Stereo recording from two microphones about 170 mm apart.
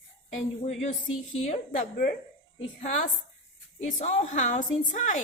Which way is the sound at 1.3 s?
40° left (ahead or behind).